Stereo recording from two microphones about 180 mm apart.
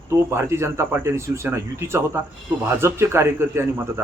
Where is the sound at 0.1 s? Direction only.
15° right (ahead or behind).